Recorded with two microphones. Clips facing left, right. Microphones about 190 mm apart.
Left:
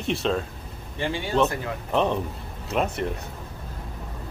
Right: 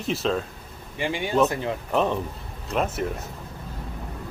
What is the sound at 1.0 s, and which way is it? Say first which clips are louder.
Speech: right 1 dB; 15° right (ahead or behind).